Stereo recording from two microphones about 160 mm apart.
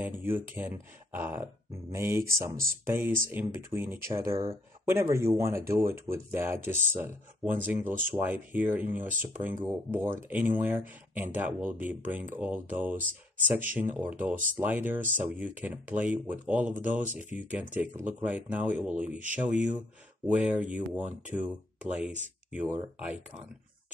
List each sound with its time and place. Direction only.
0.2 s speech: 10° right (ahead or behind)
12.9 s speech: 55° right (ahead or behind)
13.7 s speech: 10° right (ahead or behind)